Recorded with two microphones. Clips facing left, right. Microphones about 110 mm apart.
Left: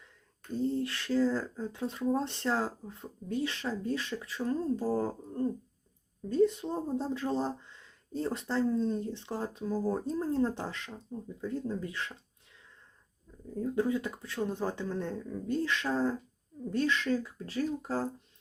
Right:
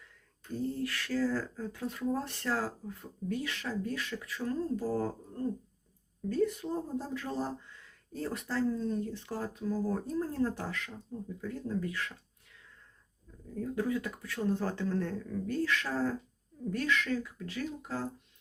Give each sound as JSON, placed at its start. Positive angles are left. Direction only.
{"t": 0.5, "sound": "speech", "side_deg": 25}
{"t": 13.6, "sound": "speech", "side_deg": 25}